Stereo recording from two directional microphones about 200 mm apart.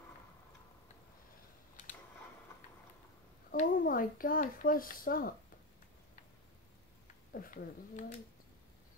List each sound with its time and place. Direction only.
3.5 s a child's voice: 45° left (ahead or behind)
7.3 s speech: 45° left (ahead or behind)